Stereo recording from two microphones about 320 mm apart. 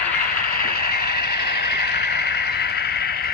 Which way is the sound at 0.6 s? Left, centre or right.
Left.